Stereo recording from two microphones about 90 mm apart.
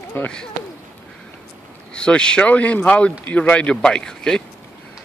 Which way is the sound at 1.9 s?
10° left (ahead or behind).